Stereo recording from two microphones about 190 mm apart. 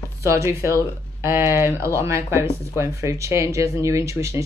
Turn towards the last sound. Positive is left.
turn(degrees=-15)  # may be behind; listen again after turning